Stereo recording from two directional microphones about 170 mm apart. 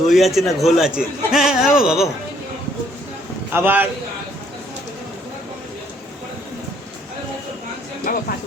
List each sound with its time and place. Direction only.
0.1 s a man's voice: centre (ahead or behind)
3.5 s a man's voice: 10° right (ahead or behind)
8.1 s a sound: 55° left (ahead or behind)